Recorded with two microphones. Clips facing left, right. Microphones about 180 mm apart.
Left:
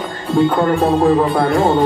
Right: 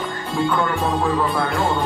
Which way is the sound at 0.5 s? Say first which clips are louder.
Left 7 dB; 35° left (ahead or behind).